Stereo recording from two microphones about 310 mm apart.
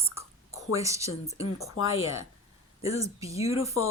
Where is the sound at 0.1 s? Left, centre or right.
Centre.